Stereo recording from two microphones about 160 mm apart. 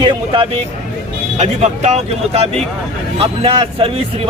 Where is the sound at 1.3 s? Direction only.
45° right (ahead or behind).